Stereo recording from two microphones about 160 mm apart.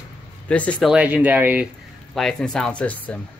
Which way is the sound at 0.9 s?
10° right (ahead or behind).